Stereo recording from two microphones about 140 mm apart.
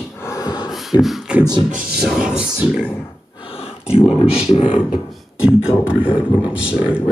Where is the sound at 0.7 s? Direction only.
Centre (ahead or behind).